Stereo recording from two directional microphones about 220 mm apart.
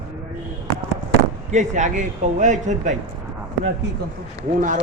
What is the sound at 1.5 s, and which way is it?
Speech, 35° right (ahead or behind).